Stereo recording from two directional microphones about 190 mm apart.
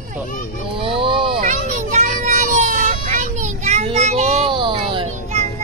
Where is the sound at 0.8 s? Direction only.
30° right (ahead or behind).